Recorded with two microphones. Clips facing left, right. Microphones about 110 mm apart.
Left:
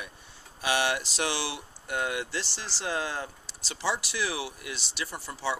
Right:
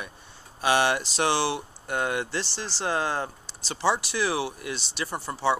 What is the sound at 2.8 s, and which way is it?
Speech, 60° right (ahead or behind).